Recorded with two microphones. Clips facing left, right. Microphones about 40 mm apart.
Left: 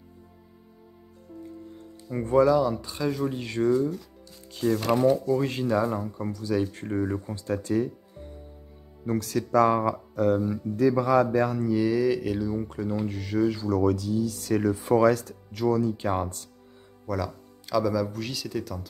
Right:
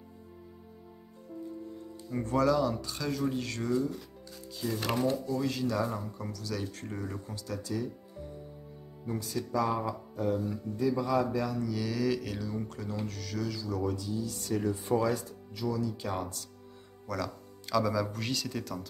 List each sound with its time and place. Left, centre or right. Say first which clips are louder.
2.0 s speech: left 7 dB; left
4.6 s speech: left 8 dB; left
5.8 s speech: left 6 dB; left
9.0 s speech: left 7 dB; left
11.3 s speech: left 7 dB; left
11.7 s speech: left 9 dB; centre; by 13.7 s left
13.8 s speech: left 9 dB; left
15.6 s speech: left 8 dB; left
17.0 s speech: left 5 dB; centre